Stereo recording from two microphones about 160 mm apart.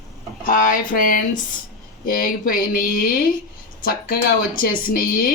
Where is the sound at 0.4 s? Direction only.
60° left (ahead or behind).